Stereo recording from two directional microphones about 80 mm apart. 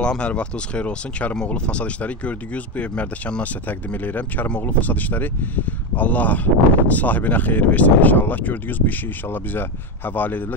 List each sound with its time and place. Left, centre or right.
0.0 s speech: centre